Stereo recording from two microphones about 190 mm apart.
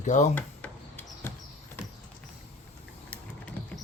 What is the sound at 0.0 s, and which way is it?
Speech, 40° left (ahead or behind).